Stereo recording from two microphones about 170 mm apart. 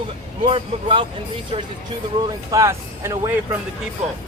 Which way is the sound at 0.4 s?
30° right (ahead or behind).